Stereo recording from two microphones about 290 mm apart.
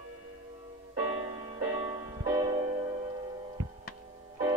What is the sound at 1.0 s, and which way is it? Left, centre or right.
Music, centre.